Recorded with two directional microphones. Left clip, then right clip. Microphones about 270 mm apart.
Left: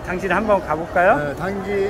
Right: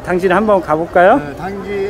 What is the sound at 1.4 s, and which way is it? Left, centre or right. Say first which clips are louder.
Speech: right 1 dB; centre.